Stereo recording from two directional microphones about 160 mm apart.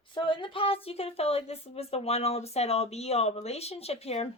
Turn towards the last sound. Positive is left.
turn(degrees=40)  # may be behind; listen again after turning